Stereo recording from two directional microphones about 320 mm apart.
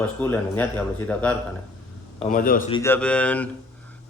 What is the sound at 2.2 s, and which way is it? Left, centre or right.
Speech, left.